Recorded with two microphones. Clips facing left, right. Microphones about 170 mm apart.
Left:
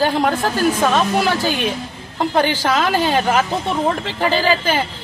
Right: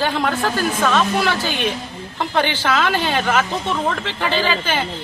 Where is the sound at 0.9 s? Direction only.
10° left (ahead or behind).